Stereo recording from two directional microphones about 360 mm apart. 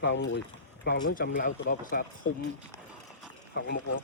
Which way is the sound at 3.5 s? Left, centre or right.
Left.